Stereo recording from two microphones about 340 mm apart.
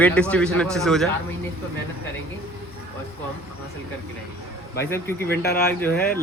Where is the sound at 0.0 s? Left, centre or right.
Centre.